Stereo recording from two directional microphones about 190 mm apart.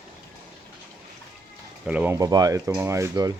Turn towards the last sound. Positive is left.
turn(degrees=-15)  # may be behind; listen again after turning